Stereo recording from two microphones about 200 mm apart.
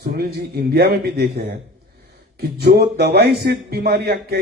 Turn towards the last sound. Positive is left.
turn(degrees=-55)  # may be behind; listen again after turning